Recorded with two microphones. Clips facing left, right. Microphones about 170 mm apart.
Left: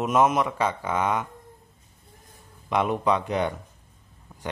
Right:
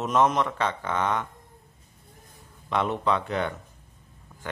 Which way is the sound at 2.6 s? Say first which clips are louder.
Left 2 dB; 15° left (ahead or behind).